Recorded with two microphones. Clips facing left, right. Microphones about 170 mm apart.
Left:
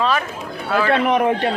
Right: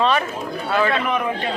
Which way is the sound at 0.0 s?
Centre (ahead or behind).